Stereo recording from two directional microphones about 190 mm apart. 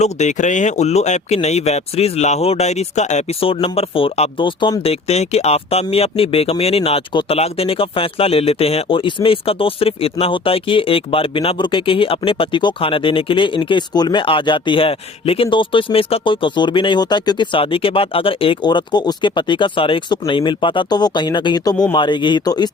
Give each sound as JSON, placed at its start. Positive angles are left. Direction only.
{"t": 0.0, "sound": "speech", "side_deg": 40}